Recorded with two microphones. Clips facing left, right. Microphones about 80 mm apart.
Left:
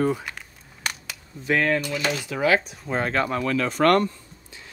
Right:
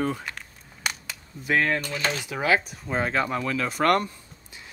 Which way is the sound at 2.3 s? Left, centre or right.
Centre.